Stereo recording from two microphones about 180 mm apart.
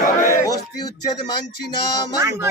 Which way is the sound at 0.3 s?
20° left (ahead or behind).